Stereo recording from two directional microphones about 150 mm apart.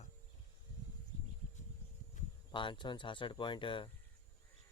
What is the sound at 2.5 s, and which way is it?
Speech, 35° left (ahead or behind).